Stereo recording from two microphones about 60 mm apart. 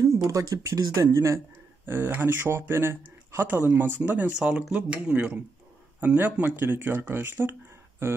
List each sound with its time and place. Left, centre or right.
0.0 s speech: right
1.1 s speech: right
1.9 s speech: right
3.4 s speech: right
4.4 s speech: centre
5.9 s speech: right